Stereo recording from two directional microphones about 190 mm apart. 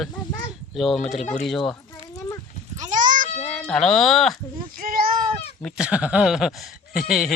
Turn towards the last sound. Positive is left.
turn(degrees=0)  # may be behind; listen again after turning